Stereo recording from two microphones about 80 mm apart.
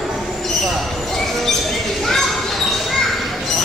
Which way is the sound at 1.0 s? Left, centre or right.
Centre.